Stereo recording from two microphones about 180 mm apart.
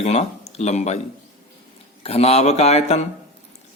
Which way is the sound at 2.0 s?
35° left (ahead or behind).